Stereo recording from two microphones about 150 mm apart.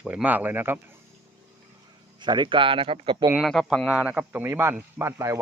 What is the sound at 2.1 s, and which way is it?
Speech, 30° right (ahead or behind).